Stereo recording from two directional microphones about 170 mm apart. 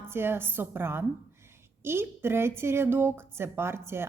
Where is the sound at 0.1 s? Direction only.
15° right (ahead or behind).